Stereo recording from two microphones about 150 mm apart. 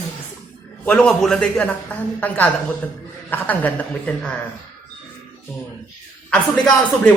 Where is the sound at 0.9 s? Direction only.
5° left (ahead or behind).